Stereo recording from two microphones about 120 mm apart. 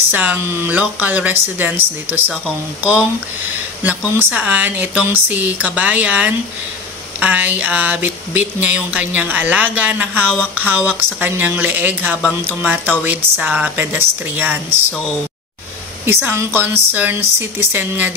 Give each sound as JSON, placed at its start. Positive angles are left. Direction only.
{"t": 0.1, "sound": "speech", "side_deg": -15}
{"t": 3.8, "sound": "speech", "side_deg": -10}
{"t": 16.1, "sound": "speech", "side_deg": -20}